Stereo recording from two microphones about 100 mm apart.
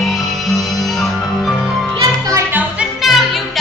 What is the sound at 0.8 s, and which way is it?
Music, centre (ahead or behind).